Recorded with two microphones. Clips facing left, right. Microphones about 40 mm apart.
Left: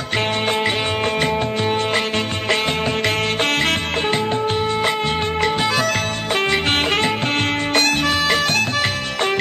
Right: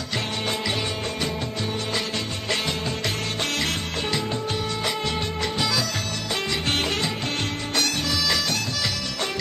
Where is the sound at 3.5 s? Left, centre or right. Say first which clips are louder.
Left 7 dB; left.